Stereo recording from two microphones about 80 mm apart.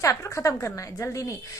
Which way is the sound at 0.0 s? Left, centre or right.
Left.